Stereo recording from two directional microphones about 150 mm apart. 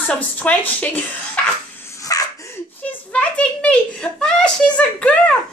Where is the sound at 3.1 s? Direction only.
10° left (ahead or behind).